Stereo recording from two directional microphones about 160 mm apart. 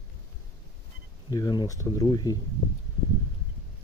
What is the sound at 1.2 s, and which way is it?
Speech, 25° left (ahead or behind).